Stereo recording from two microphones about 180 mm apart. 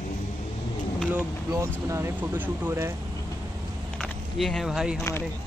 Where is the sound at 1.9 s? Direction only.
15° right (ahead or behind).